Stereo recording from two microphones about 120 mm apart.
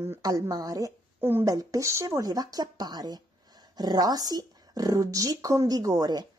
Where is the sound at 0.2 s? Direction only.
30° right (ahead or behind).